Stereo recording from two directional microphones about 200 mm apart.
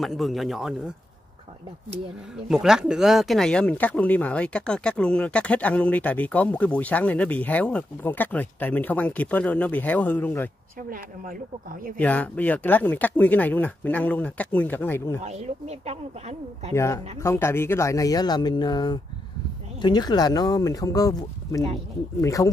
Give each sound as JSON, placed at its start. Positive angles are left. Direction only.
{"t": 0.0, "sound": "speech", "side_deg": 0}
{"t": 2.5, "sound": "speech", "side_deg": -5}
{"t": 12.0, "sound": "speech", "side_deg": 5}
{"t": 15.2, "sound": "speech", "side_deg": -35}
{"t": 16.7, "sound": "speech", "side_deg": 15}